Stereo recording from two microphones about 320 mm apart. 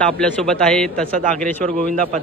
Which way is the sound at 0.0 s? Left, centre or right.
Centre.